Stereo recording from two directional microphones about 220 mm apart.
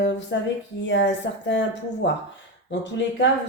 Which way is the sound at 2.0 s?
55° left (ahead or behind).